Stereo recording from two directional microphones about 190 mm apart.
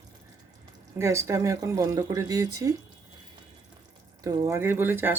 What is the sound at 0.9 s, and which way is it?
Speech, 15° right (ahead or behind).